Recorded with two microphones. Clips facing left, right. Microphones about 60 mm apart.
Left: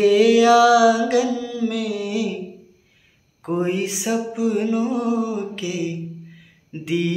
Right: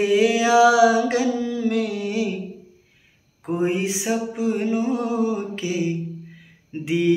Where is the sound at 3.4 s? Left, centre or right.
Centre.